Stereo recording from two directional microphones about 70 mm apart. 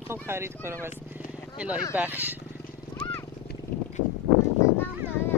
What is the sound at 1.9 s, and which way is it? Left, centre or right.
Speech, right.